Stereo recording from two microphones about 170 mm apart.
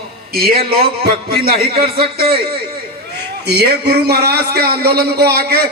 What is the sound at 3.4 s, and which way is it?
A man's voice, 70° right (ahead or behind).